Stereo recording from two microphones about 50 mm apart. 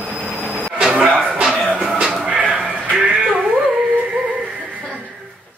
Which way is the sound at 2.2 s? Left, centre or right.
Right.